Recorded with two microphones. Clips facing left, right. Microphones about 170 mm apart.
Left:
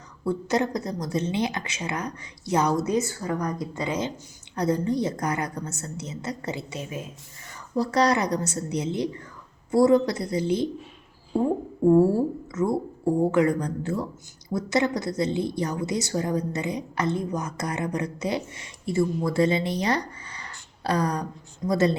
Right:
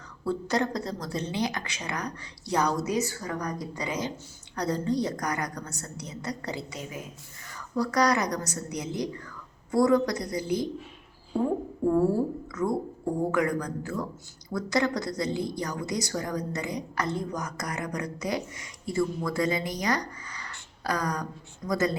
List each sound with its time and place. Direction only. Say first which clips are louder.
0.3 s a woman's voice: left 3 dB; 20° left (ahead or behind)
12.6 s a woman's voice: left 3 dB; 25° left (ahead or behind)